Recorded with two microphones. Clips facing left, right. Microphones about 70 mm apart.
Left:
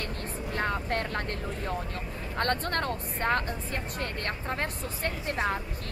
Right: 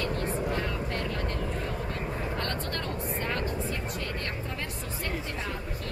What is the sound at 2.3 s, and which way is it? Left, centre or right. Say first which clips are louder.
Speech: left 4 dB; left.